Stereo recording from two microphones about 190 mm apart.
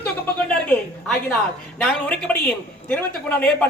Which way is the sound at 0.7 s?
10° left (ahead or behind).